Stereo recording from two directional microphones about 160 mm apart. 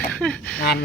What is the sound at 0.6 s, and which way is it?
Speech, 75° left (ahead or behind).